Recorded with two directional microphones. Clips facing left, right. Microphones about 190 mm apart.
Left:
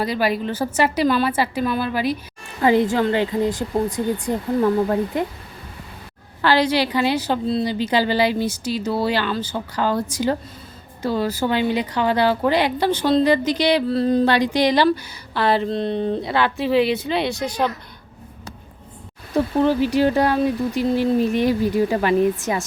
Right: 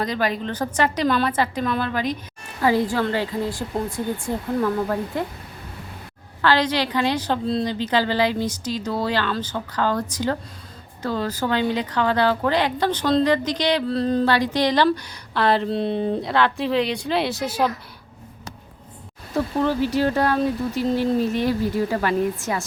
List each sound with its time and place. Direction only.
0.0 s a woman's voice: 10° left (ahead or behind)
2.6 s a woman's voice: 20° left (ahead or behind)
6.4 s a woman's voice: 10° left (ahead or behind); by 17.7 s 5° right (ahead or behind)
19.6 s a woman's voice: 15° left (ahead or behind)